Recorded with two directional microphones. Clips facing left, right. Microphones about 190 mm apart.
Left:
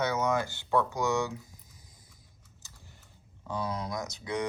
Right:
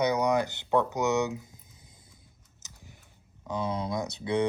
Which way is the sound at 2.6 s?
20° right (ahead or behind).